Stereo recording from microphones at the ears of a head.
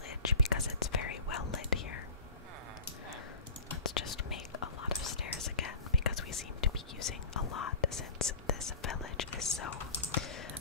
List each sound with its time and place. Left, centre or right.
0.3 s whispering: left
3.7 s whispering: left